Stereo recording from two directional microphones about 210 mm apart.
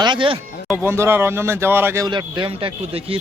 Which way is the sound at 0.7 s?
10° right (ahead or behind).